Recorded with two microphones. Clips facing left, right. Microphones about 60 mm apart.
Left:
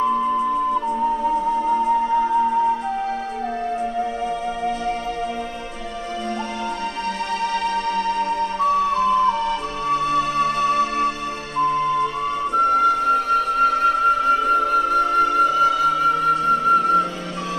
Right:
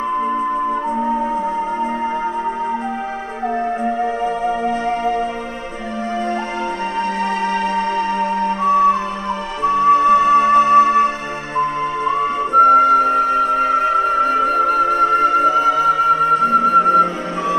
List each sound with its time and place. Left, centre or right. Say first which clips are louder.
0.8 s music: right 1 dB; right
3.8 s music: right 5 dB; right
7.2 s music: right 4 dB; right